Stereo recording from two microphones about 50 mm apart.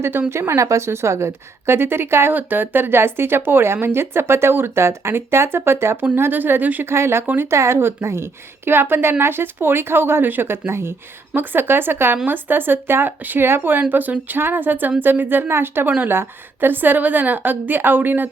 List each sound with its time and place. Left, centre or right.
0.0 s speech: right
0.3 s a woman's voice: right
2.3 s speech: right
6.1 s a woman's voice: right
6.8 s a woman's voice: right
7.5 s speech: right
10.7 s a woman's voice: right
11.3 s speech: right
13.9 s a woman's voice: right